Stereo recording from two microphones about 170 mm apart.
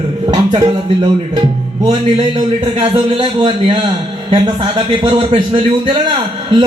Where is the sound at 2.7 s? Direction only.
30° right (ahead or behind).